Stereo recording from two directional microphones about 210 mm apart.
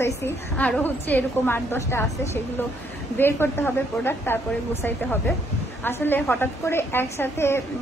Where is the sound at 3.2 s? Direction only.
10° left (ahead or behind).